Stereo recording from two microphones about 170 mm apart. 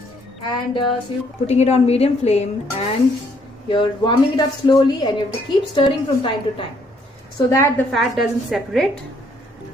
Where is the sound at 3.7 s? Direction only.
25° left (ahead or behind).